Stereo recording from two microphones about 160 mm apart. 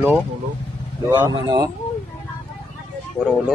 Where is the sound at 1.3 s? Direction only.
25° right (ahead or behind).